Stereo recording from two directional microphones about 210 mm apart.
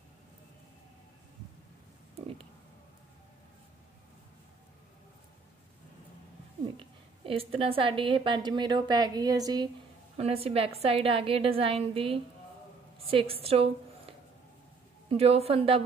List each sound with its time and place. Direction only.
2.1 s a sound: 25° right (ahead or behind)
6.6 s a woman's voice: 25° right (ahead or behind)
10.1 s a woman's voice: 30° right (ahead or behind)